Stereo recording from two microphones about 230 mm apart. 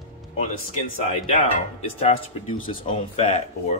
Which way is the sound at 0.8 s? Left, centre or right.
Left.